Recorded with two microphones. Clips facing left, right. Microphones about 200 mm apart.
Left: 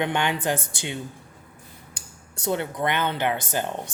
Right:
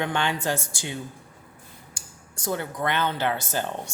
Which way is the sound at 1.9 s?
65° left (ahead or behind).